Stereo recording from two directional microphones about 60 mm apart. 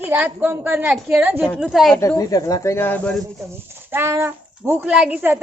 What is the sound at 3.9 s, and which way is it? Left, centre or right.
A woman's voice, right.